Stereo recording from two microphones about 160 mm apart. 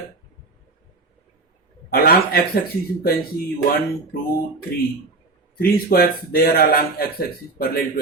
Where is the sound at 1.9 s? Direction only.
75° left (ahead or behind).